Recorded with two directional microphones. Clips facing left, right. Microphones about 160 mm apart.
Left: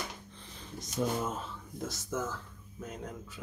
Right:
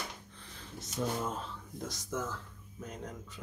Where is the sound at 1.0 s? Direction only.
10° left (ahead or behind).